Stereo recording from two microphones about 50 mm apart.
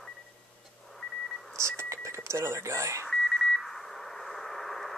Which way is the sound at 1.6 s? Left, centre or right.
Right.